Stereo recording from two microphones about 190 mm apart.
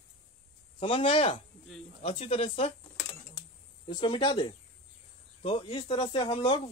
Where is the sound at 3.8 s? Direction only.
25° left (ahead or behind).